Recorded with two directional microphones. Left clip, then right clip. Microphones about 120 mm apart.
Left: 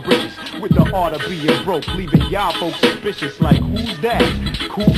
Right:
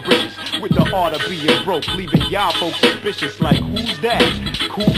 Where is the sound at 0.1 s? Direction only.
45° left (ahead or behind).